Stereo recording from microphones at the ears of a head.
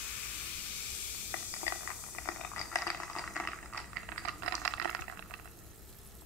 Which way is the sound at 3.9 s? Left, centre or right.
Right.